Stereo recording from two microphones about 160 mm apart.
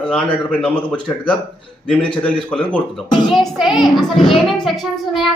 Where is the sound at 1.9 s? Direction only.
5° left (ahead or behind).